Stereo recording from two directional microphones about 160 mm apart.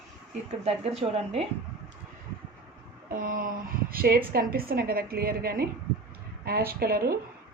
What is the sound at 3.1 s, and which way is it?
A woman's voice, 60° right (ahead or behind).